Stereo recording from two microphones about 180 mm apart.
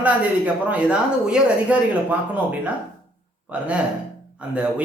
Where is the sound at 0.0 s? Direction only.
10° right (ahead or behind).